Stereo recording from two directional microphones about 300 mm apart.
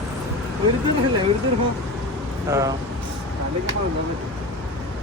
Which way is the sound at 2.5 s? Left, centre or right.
Centre.